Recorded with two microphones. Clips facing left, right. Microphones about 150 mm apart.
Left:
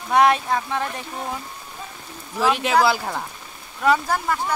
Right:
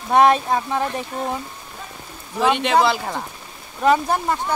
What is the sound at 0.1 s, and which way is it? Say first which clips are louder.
Speech: right 2 dB; 25° right (ahead or behind).